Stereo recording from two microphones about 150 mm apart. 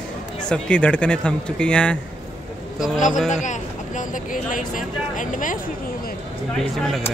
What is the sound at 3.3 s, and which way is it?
Speech, 55° left (ahead or behind).